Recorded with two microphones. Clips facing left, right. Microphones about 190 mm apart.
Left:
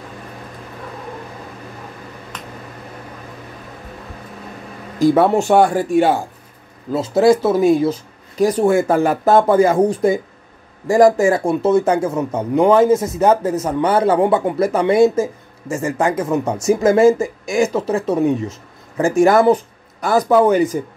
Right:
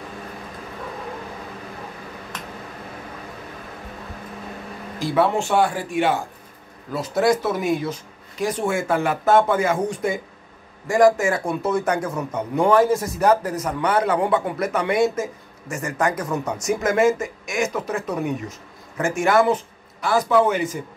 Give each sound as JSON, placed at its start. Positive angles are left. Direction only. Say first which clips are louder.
{"t": 5.0, "sound": "speech", "louder": "left 7 dB", "side_deg": 45}
{"t": 6.9, "sound": "speech", "louder": "left 6 dB", "side_deg": 25}